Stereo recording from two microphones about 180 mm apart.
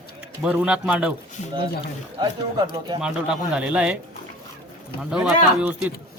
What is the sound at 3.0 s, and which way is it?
Speech, 5° right (ahead or behind).